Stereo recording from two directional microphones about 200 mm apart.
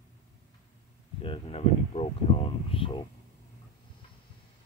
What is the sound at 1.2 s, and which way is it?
Speech, 30° left (ahead or behind).